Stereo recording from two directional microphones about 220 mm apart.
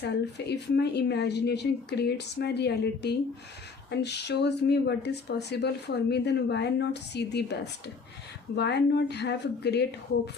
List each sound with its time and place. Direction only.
0.0 s speech: 50° left (ahead or behind)